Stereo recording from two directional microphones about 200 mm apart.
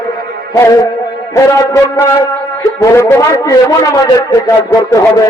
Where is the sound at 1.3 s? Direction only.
15° left (ahead or behind).